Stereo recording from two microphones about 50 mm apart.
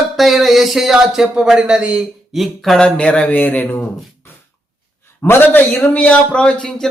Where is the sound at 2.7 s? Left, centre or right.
Left.